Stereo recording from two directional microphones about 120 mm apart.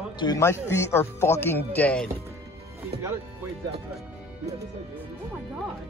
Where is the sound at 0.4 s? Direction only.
20° left (ahead or behind).